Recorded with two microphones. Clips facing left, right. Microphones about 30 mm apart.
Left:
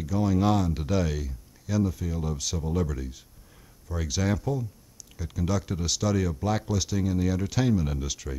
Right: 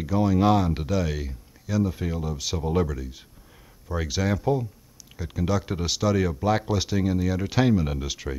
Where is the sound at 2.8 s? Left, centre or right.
Centre.